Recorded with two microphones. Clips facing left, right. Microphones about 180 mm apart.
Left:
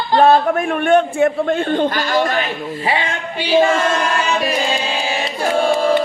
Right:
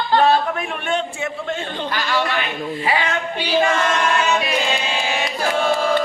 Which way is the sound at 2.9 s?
30° left (ahead or behind).